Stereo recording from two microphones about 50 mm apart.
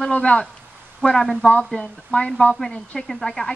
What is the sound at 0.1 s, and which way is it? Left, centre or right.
Speech, left.